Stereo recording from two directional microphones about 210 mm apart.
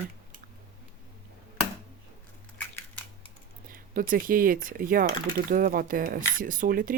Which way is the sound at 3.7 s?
40° right (ahead or behind).